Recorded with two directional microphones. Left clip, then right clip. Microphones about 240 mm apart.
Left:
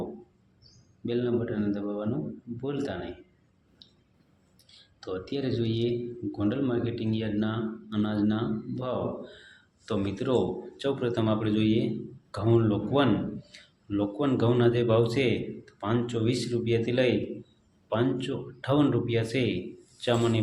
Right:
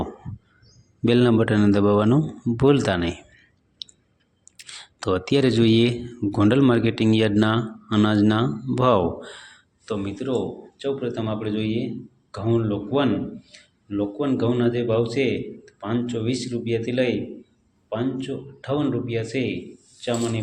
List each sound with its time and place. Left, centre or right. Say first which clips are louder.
1.0 s a man's voice: right 10 dB; right
4.5 s speech: right 16 dB; right
9.8 s a man's voice: right 2 dB; centre